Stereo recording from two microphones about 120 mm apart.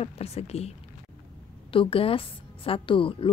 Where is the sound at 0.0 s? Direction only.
60° left (ahead or behind).